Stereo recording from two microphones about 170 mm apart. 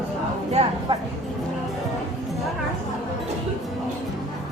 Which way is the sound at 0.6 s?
40° right (ahead or behind).